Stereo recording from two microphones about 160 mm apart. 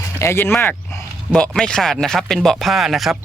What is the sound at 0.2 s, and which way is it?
Speech, 15° left (ahead or behind).